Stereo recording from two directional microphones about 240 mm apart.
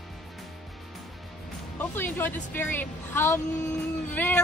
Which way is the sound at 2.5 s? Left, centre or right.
Centre.